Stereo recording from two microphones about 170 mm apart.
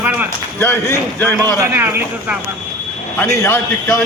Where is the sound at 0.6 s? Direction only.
15° left (ahead or behind).